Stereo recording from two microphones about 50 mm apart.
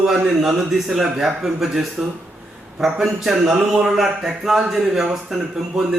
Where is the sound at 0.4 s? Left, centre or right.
Centre.